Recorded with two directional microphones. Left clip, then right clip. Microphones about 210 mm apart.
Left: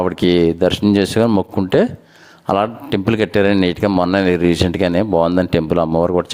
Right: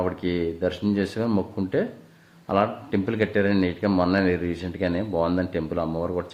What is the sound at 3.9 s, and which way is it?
Speech, 35° left (ahead or behind).